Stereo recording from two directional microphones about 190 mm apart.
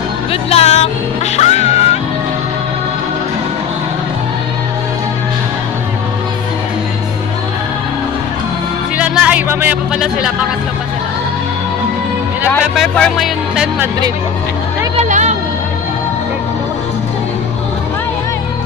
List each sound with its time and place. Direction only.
0.3 s speech: 35° left (ahead or behind)
1.3 s music: 35° left (ahead or behind)
8.9 s speech: 5° right (ahead or behind)
12.7 s music: 5° left (ahead or behind)
15.0 s a sound: 40° right (ahead or behind)